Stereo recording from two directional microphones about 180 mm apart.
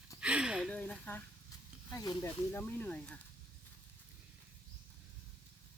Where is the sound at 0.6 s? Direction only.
5° left (ahead or behind).